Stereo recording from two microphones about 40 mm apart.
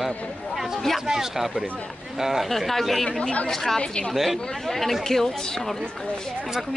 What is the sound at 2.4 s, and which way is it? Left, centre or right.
Speech, centre.